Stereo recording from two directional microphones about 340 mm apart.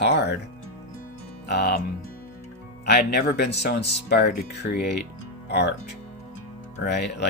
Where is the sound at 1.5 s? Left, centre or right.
Left.